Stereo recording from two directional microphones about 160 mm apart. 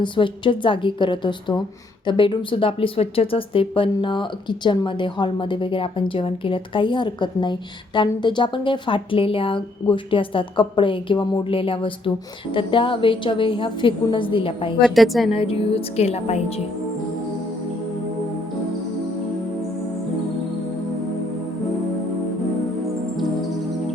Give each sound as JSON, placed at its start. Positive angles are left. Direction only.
{"t": 0.0, "sound": "speech", "side_deg": 30}
{"t": 14.8, "sound": "a woman's voice", "side_deg": 0}
{"t": 15.3, "sound": "speech", "side_deg": 35}